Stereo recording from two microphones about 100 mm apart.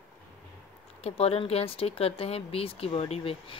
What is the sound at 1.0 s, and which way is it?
Speech, 90° left.